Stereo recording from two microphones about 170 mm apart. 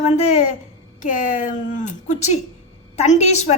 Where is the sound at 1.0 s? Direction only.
50° left (ahead or behind).